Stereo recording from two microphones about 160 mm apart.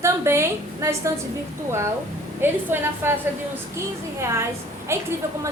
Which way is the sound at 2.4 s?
15° right (ahead or behind).